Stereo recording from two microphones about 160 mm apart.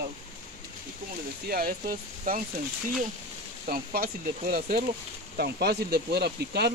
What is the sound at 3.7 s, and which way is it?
Speech, 70° right (ahead or behind).